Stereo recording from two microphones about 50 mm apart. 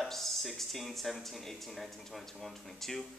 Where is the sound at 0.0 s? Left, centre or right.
Centre.